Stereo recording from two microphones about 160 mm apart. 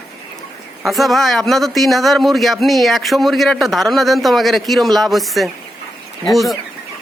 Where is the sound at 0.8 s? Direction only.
Centre (ahead or behind).